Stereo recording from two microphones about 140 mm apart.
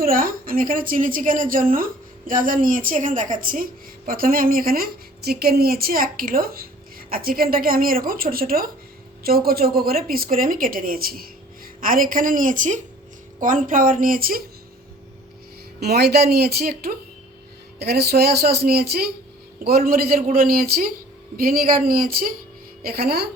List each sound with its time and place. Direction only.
0.0 s a woman's voice: 90° right
16.3 s a woman's voice: 90° right
18.4 s a woman's voice: 90° right